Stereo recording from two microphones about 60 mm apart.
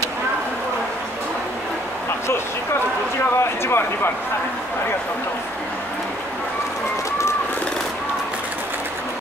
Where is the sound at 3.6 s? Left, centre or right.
Left.